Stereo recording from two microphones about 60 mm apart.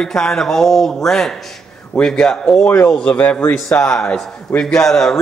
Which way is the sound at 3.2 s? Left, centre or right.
Left.